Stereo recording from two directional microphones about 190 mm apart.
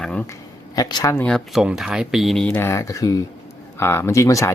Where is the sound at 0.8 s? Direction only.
20° left (ahead or behind).